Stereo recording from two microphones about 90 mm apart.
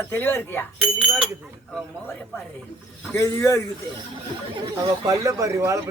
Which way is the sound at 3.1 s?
35° left (ahead or behind).